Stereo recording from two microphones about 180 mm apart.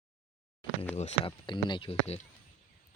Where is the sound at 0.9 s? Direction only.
35° left (ahead or behind).